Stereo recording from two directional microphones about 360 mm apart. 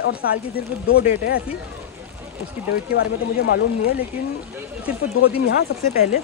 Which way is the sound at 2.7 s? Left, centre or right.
Left.